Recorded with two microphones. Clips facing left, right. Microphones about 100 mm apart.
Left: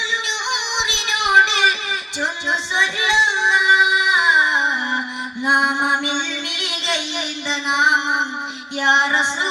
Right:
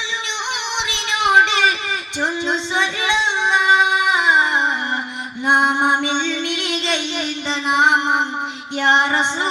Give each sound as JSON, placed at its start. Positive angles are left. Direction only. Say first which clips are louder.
{"t": 0.5, "sound": "music", "louder": "left 1 dB", "side_deg": -40}
{"t": 2.7, "sound": "child singing", "louder": "left 3 dB", "side_deg": -35}
{"t": 5.5, "sound": "mantra", "louder": "right 2 dB", "side_deg": -35}
{"t": 7.7, "sound": "music", "louder": "right 2 dB", "side_deg": -40}